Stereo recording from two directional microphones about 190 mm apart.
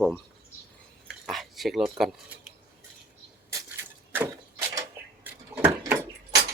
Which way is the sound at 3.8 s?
10° right (ahead or behind).